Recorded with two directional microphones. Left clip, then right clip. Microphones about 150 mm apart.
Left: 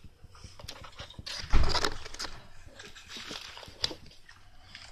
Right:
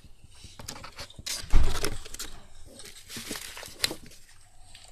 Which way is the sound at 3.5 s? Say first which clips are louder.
Right 4 dB; 15° right (ahead or behind).